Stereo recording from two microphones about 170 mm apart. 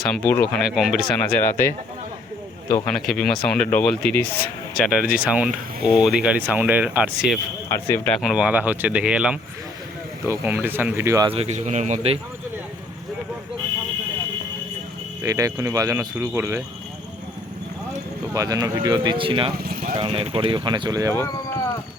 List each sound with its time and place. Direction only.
0.0 s speech: 10° left (ahead or behind)
1.3 s speech: 10° left (ahead or behind)
4.8 s speech: centre (ahead or behind)
7.7 s speech: 15° left (ahead or behind)
8.2 s speech: 5° right (ahead or behind)
11.3 s a man's voice: 40° right (ahead or behind)
15.2 s speech: 20° right (ahead or behind)
18.3 s speech: 20° right (ahead or behind)
19.5 s speech: 60° right (ahead or behind)
20.0 s speech: 30° right (ahead or behind)